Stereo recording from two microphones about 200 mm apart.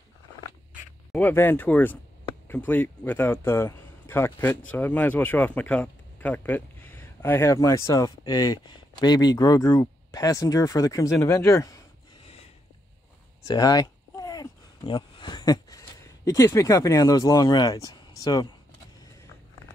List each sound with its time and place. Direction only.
1.1 s speech: 10° left (ahead or behind)
13.5 s a sound: 20° left (ahead or behind)
16.3 s speech: 15° left (ahead or behind)